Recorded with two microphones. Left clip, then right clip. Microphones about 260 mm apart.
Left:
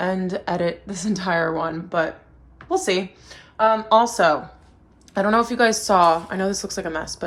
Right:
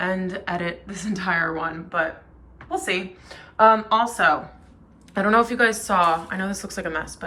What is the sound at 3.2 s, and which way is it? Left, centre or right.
Speech, centre.